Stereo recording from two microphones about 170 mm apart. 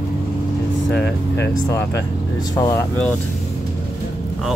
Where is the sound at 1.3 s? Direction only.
15° left (ahead or behind).